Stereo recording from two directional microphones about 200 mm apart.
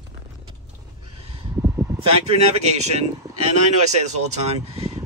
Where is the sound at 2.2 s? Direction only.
30° right (ahead or behind).